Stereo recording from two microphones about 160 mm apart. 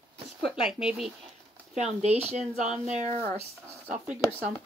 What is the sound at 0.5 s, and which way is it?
Speech, 5° right (ahead or behind).